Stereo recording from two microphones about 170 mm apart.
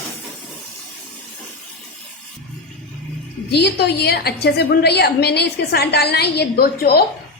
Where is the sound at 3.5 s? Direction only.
75° left (ahead or behind).